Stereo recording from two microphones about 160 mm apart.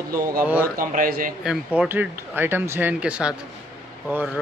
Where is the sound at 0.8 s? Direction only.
60° right (ahead or behind).